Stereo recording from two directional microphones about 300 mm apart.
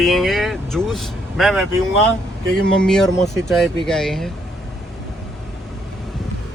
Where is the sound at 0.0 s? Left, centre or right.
Centre.